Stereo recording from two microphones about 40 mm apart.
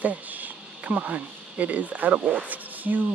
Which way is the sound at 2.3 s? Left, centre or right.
Right.